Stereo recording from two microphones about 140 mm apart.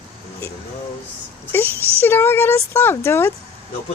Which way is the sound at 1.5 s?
15° left (ahead or behind).